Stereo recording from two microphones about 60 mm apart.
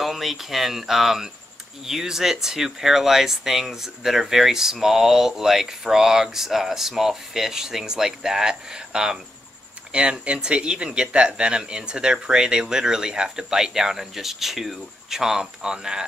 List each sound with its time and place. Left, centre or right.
0.0 s speech: centre